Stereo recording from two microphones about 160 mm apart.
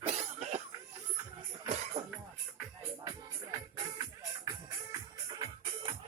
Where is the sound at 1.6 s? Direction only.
45° right (ahead or behind).